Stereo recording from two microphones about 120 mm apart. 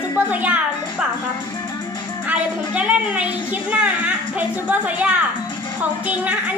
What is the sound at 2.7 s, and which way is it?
A woman's voice, 10° right (ahead or behind).